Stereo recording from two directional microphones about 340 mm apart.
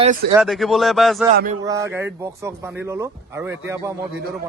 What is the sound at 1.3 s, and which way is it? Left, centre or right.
Speech, right.